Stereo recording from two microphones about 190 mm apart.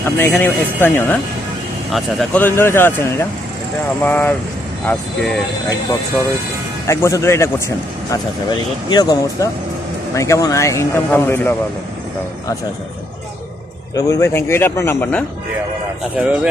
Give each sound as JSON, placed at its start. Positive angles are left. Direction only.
{"t": 0.0, "sound": "speech", "side_deg": 10}
{"t": 6.8, "sound": "speech", "side_deg": 15}
{"t": 13.9, "sound": "speech", "side_deg": 15}
{"t": 16.2, "sound": "speech", "side_deg": -5}